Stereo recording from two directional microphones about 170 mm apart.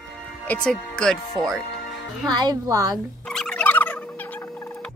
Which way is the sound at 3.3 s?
5° left (ahead or behind).